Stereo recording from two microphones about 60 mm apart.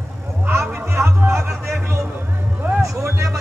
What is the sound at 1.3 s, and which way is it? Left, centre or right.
Speech, right.